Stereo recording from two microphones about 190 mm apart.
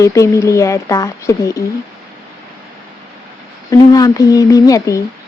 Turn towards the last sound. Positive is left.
turn(degrees=15)  # may be behind; listen again after turning